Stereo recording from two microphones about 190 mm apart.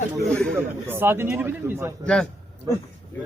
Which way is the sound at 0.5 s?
10° right (ahead or behind).